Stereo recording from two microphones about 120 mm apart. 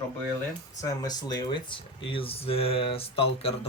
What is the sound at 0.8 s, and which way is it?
Speech, 30° left (ahead or behind).